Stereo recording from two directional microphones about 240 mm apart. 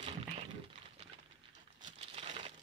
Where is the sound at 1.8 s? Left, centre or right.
Right.